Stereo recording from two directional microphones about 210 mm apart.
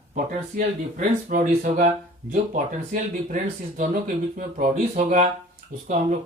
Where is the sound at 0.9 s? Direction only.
40° right (ahead or behind).